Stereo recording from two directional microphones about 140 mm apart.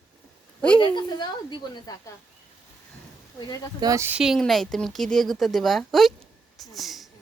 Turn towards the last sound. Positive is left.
turn(degrees=0)  # may be behind; listen again after turning